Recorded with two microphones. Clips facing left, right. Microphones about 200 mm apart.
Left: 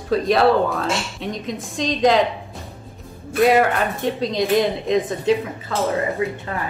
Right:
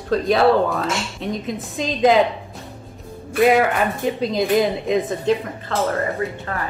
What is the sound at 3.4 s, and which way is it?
Speech, centre (ahead or behind).